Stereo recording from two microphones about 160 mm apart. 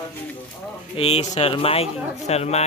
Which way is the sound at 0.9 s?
40° left (ahead or behind).